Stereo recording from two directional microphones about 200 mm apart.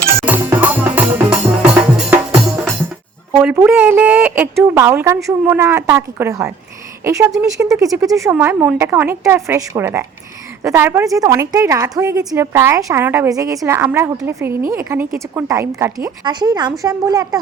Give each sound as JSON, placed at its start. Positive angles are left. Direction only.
{"t": 0.3, "sound": "music", "side_deg": -10}
{"t": 3.3, "sound": "a woman's voice", "side_deg": -10}